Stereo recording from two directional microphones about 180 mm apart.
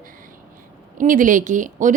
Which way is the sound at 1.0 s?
45° right (ahead or behind).